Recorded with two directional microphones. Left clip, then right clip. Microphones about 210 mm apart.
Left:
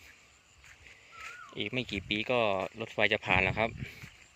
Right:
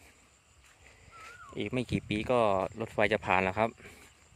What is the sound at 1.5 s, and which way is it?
Speech, 20° right (ahead or behind).